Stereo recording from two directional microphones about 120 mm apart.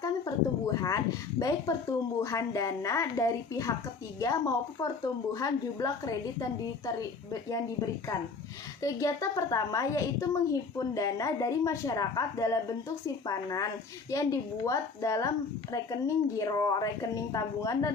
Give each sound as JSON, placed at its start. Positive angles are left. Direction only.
{"t": 0.0, "sound": "speech", "side_deg": 30}
{"t": 8.8, "sound": "speech", "side_deg": 25}